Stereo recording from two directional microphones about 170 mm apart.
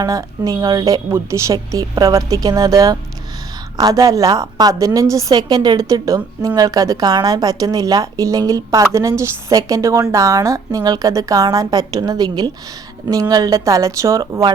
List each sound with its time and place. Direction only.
0.0 s a woman's voice: 20° right (ahead or behind)